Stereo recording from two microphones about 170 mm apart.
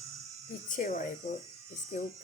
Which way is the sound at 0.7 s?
50° left (ahead or behind).